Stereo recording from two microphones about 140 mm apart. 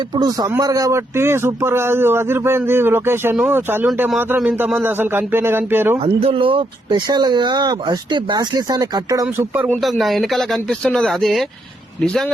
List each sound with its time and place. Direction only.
0.2 s speech: 25° right (ahead or behind)
6.1 s speech: 40° right (ahead or behind)
10.0 s speech: centre (ahead or behind)